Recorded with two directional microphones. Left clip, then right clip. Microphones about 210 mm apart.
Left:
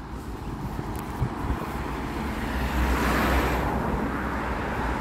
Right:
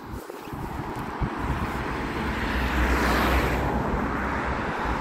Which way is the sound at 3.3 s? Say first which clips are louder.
Even; 15° left (ahead or behind).